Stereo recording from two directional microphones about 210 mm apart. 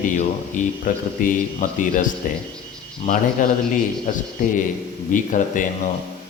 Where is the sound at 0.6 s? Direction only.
40° left (ahead or behind).